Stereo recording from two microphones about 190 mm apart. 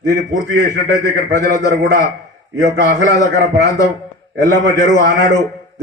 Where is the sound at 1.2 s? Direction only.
60° right (ahead or behind).